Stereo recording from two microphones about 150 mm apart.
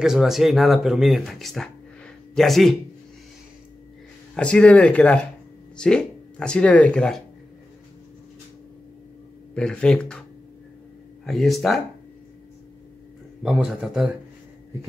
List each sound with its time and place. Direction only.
0.0 s speech: 5° right (ahead or behind)
4.4 s speech: 5° left (ahead or behind)
9.6 s speech: 5° left (ahead or behind)
11.2 s speech: centre (ahead or behind)
13.4 s speech: 5° right (ahead or behind)